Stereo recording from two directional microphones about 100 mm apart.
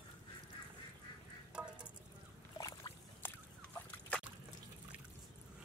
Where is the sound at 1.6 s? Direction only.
10° right (ahead or behind).